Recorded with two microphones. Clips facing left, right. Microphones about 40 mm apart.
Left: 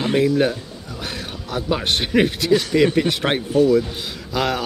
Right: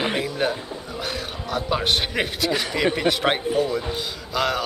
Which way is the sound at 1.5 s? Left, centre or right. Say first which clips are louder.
Left 1 dB; centre.